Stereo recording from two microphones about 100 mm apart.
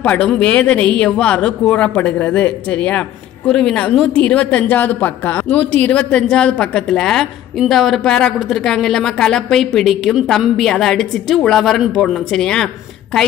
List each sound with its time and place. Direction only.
0.0 s a woman's voice: 15° left (ahead or behind)